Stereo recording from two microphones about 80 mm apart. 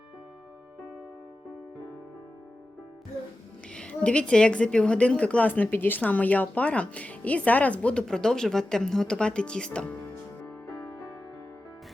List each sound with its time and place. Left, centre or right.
3.7 s a woman's voice: centre